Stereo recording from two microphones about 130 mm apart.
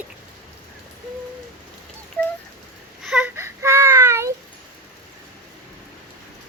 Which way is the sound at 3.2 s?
20° right (ahead or behind).